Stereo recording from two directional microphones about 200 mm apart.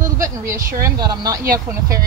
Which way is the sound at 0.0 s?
15° right (ahead or behind).